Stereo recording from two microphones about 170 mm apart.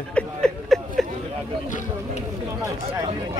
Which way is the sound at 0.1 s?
5° left (ahead or behind).